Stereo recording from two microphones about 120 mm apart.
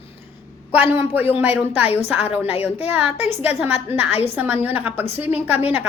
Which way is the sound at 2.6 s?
15° right (ahead or behind).